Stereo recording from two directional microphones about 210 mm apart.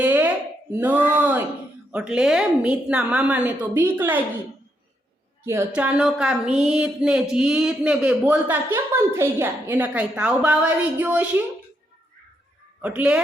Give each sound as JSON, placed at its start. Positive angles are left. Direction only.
{"t": 0.0, "sound": "a sound", "side_deg": -10}
{"t": 1.9, "sound": "speech", "side_deg": -5}
{"t": 5.5, "sound": "speech", "side_deg": -10}
{"t": 12.8, "sound": "speech", "side_deg": -5}